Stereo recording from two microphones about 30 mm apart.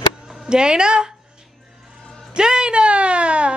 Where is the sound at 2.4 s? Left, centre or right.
Right.